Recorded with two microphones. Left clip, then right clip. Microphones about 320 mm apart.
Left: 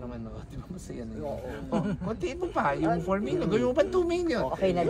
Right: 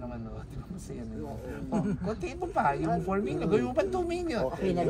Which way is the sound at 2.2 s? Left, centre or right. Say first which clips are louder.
Left 1 dB; centre.